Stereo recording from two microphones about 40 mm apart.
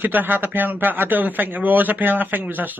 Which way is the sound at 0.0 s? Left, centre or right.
Right.